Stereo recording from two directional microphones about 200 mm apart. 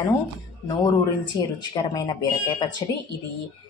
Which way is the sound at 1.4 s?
20° left (ahead or behind).